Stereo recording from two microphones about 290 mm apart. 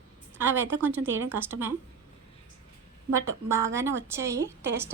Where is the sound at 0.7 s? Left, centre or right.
Centre.